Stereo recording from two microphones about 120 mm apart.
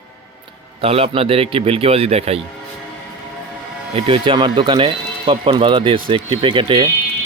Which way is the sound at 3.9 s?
45° right (ahead or behind).